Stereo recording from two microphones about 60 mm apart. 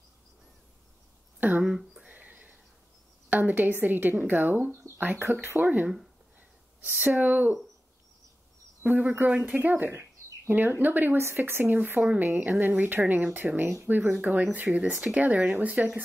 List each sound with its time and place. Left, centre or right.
1.4 s speech: right
2.0 s a sound: right
3.3 s a woman's voice: right
8.8 s speech: right
9.6 s a sound: right
10.7 s a woman's voice: right